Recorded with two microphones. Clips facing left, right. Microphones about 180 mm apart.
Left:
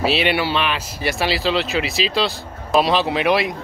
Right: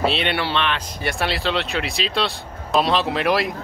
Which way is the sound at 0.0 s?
5° left (ahead or behind).